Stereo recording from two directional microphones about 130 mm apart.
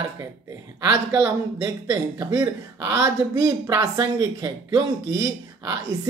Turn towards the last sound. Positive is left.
turn(degrees=-25)  # may be behind; listen again after turning